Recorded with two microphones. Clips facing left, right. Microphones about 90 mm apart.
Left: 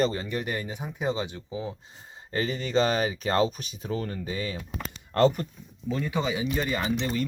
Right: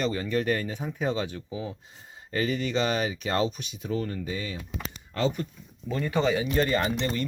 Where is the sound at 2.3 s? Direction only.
35° left (ahead or behind).